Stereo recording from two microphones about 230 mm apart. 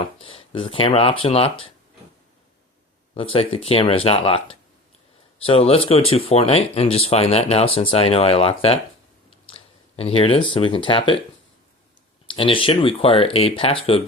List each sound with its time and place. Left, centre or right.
0.0 s speech: left
3.2 s speech: left
12.3 s speech: left